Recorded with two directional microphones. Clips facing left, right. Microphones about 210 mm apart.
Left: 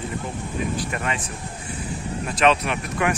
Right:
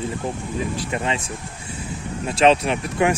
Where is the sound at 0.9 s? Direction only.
25° right (ahead or behind).